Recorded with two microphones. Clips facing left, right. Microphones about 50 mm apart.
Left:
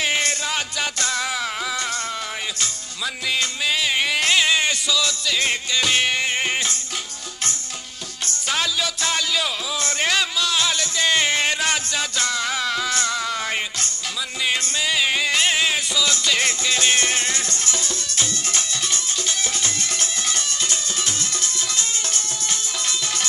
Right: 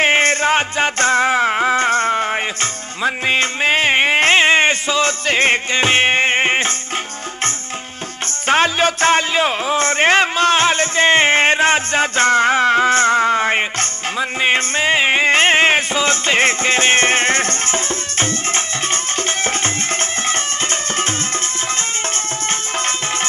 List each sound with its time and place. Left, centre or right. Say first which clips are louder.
0.0 s music: right 9 dB; right
8.5 s music: right 10 dB; right